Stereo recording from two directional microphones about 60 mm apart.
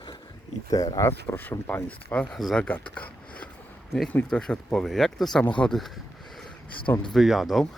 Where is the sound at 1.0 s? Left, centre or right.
Left.